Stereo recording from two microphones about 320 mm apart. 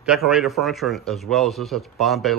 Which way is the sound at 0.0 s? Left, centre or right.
Centre.